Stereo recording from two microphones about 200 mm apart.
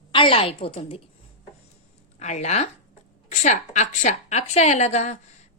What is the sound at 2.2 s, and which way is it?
A woman's voice, 35° left (ahead or behind).